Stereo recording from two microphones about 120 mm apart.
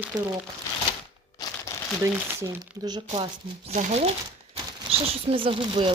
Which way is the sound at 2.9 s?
35° right (ahead or behind).